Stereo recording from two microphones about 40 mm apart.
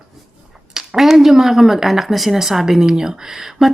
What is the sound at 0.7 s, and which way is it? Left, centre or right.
Speech, centre.